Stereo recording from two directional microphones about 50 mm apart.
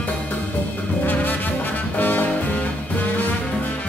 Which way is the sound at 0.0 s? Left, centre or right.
Left.